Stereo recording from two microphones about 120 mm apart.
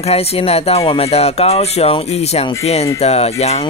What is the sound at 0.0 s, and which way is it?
Speech, 55° left (ahead or behind).